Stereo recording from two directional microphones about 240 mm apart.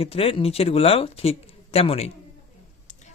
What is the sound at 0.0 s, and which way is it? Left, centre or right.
Speech, left.